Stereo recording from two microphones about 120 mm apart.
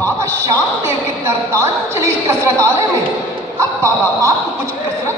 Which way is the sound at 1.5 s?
25° right (ahead or behind).